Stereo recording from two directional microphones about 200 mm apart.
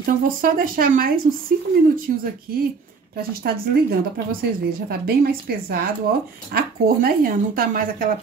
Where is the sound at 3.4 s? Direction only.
50° right (ahead or behind).